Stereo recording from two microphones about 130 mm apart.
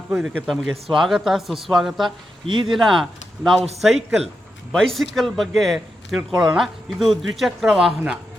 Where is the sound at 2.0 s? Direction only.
35° right (ahead or behind).